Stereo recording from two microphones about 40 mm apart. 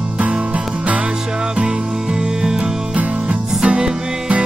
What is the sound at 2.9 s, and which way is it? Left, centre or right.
Music, right.